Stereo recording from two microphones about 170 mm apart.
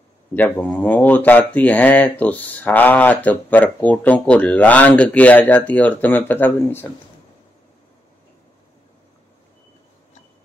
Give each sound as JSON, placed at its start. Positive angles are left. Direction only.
{"t": 0.3, "sound": "speech", "side_deg": 10}